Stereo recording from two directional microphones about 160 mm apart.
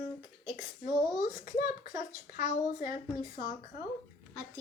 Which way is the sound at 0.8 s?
60° left (ahead or behind).